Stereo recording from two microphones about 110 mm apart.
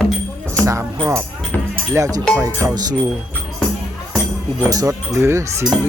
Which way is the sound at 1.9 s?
30° right (ahead or behind).